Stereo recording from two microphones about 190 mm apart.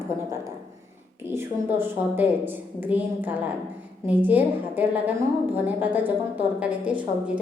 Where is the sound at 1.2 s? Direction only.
10° right (ahead or behind).